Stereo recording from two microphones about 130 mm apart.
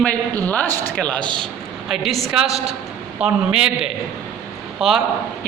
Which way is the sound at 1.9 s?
Centre (ahead or behind).